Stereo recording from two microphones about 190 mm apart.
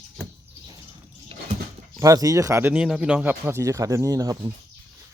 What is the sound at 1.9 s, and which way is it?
Speech, 20° right (ahead or behind).